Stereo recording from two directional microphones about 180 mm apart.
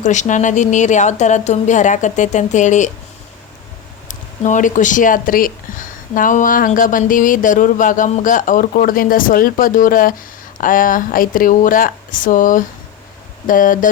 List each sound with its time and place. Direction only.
0.0 s speech: 40° left (ahead or behind)
4.1 s speech: 45° left (ahead or behind)